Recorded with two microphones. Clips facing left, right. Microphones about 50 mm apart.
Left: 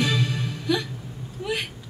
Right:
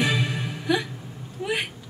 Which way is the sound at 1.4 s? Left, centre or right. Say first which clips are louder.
Right 1 dB; centre.